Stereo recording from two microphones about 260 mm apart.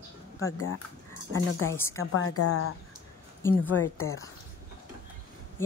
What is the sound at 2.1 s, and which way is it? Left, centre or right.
Speech, left.